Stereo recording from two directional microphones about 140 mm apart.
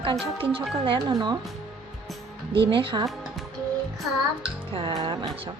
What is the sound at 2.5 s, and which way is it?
Speech, 35° right (ahead or behind).